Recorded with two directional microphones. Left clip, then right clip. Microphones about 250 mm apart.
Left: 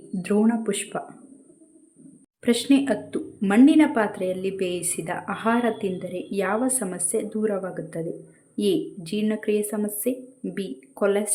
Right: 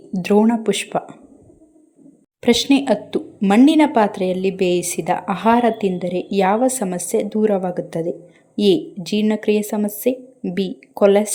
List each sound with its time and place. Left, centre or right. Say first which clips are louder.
0.1 s a woman's voice: right 7 dB; centre
2.4 s a woman's voice: right 5 dB; centre